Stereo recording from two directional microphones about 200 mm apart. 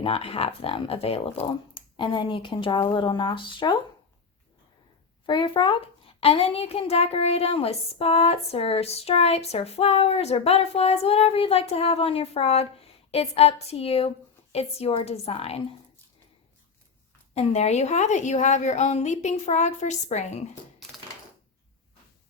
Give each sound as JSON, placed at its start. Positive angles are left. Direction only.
{"t": 0.0, "sound": "speech", "side_deg": 30}
{"t": 5.2, "sound": "a child's voice", "side_deg": 25}
{"t": 17.3, "sound": "a child's voice", "side_deg": 35}